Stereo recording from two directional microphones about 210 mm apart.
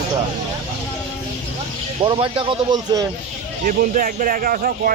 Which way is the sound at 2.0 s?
25° right (ahead or behind).